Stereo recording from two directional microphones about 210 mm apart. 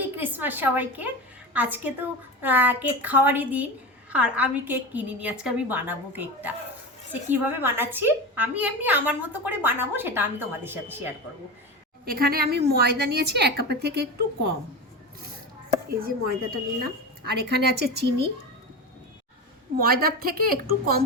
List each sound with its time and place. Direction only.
0.2 s a woman's voice: 10° right (ahead or behind)
12.0 s a woman's voice: 45° right (ahead or behind)
15.9 s a woman's voice: 45° right (ahead or behind)
19.8 s a woman's voice: 45° right (ahead or behind)